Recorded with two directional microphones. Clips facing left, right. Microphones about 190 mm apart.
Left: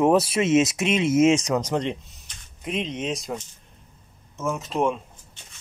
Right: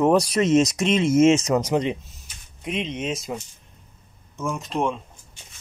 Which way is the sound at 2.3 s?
10° right (ahead or behind).